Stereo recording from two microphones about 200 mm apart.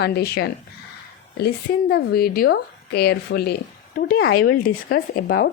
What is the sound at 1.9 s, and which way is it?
A woman's voice, 50° left (ahead or behind).